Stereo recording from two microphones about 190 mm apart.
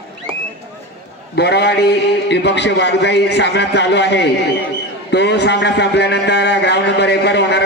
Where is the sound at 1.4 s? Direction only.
60° left (ahead or behind).